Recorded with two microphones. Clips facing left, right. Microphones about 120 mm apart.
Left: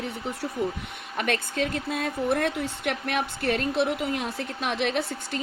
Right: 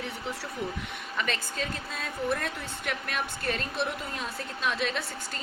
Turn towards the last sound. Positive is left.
turn(degrees=60)  # may be behind; listen again after turning